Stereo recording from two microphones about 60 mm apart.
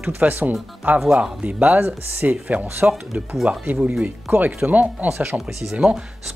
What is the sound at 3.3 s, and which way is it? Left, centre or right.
Speech, centre.